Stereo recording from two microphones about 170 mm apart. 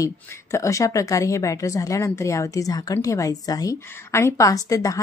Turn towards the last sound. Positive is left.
turn(degrees=20)  # may be behind; listen again after turning